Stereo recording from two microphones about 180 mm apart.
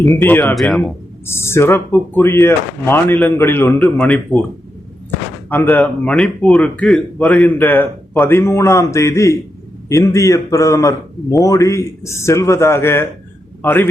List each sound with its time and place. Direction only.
0.2 s a man's voice: 10° left (ahead or behind)
0.5 s speech: centre (ahead or behind)
1.3 s a man's voice: 15° left (ahead or behind)
5.5 s a man's voice: 10° left (ahead or behind)